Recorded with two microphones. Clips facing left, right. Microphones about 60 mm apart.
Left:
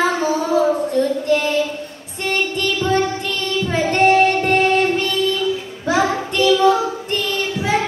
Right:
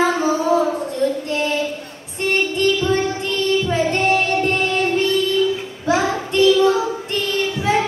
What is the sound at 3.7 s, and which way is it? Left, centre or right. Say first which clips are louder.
Music: left 4 dB; left.